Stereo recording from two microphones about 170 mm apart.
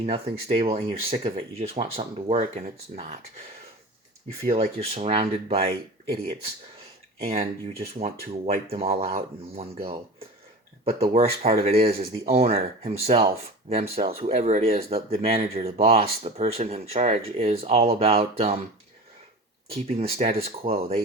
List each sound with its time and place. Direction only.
0.0 s speech: 35° right (ahead or behind)
4.4 s speech: 35° right (ahead or behind)
8.0 s speech: 35° right (ahead or behind)
19.7 s speech: 35° right (ahead or behind)